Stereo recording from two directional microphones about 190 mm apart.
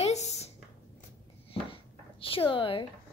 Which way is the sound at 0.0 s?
35° left (ahead or behind).